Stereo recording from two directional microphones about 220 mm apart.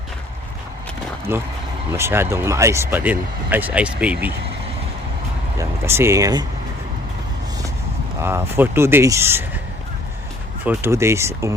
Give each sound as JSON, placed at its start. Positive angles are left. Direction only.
{"t": 1.3, "sound": "speech", "side_deg": -10}
{"t": 5.5, "sound": "speech", "side_deg": -10}
{"t": 8.2, "sound": "speech", "side_deg": -10}
{"t": 10.7, "sound": "speech", "side_deg": -10}